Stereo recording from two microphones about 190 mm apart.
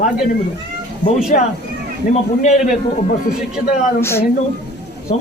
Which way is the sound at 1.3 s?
45° left (ahead or behind).